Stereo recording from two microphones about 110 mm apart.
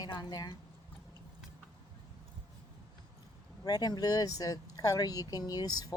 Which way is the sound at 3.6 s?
35° left (ahead or behind).